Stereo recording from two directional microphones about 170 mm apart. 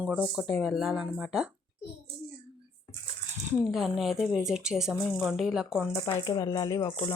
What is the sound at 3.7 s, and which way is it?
Speech, centre (ahead or behind).